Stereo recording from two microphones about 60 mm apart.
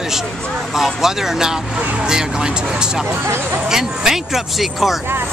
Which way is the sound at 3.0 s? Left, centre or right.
Right.